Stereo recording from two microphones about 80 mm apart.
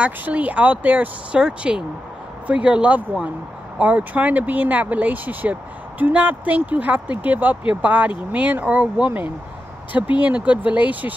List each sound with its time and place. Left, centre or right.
0.0 s speech: centre